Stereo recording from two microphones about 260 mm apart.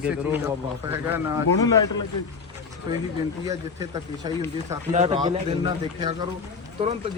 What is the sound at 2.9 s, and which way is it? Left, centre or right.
Speech, centre.